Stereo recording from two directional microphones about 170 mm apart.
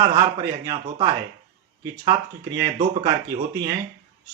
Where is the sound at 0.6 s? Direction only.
20° right (ahead or behind).